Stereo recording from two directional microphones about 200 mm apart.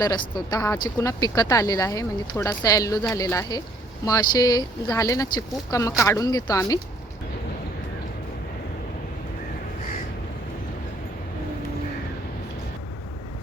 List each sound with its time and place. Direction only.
0.0 s speech: 20° left (ahead or behind)